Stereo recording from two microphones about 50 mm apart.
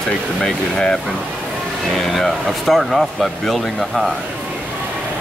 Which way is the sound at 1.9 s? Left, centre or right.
Centre.